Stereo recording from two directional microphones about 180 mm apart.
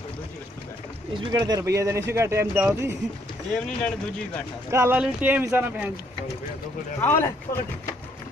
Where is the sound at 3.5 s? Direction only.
5° left (ahead or behind).